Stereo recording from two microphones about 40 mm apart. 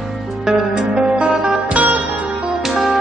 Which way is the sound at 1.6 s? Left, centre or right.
Right.